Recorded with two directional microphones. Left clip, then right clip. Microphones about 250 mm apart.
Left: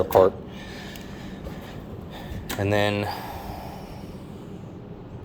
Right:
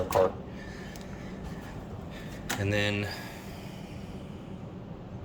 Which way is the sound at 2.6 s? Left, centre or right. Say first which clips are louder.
Left 7 dB; centre.